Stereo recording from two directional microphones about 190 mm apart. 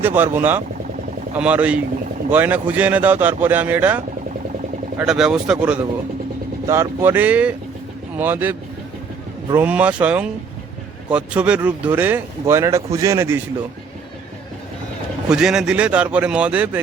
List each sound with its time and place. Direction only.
0.0 s speech: 10° right (ahead or behind)
15.3 s speech: 5° right (ahead or behind)